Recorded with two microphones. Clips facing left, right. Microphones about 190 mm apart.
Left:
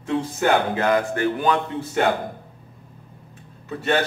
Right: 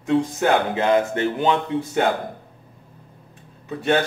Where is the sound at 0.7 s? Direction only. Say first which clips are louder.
Right 2 dB; 25° right (ahead or behind).